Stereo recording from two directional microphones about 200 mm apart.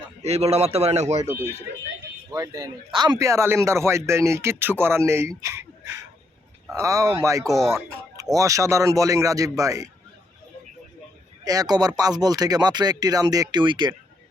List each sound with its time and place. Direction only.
0.2 s a man's voice: 30° right (ahead or behind)
2.3 s speech: 20° right (ahead or behind)
11.4 s speech: 20° right (ahead or behind)